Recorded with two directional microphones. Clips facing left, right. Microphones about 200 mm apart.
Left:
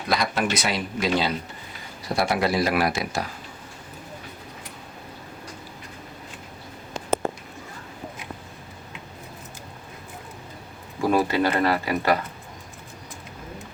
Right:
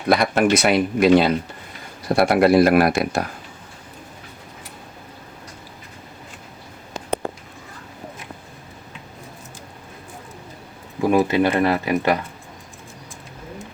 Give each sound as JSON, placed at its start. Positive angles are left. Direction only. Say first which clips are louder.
{"t": 0.1, "sound": "speech", "louder": "right 8 dB", "side_deg": -55}
{"t": 11.1, "sound": "speech", "louder": "right 4 dB", "side_deg": -20}